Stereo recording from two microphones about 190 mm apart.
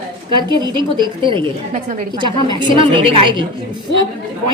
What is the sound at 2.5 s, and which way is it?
Speech, 25° right (ahead or behind).